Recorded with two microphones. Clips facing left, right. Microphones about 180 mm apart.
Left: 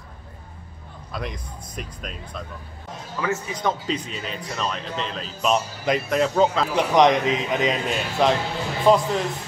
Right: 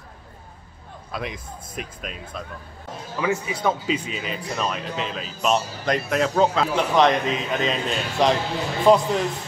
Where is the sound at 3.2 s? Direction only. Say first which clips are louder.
Right 2 dB; 10° right (ahead or behind).